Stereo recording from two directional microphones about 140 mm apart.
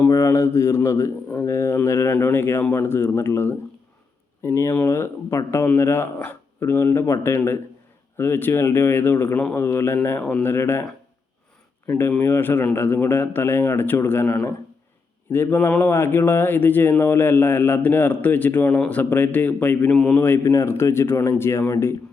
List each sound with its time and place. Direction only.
0.1 s speech: 20° left (ahead or behind)
11.9 s speech: 15° left (ahead or behind)